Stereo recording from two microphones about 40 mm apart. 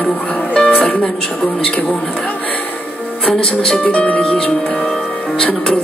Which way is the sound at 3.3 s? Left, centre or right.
Left.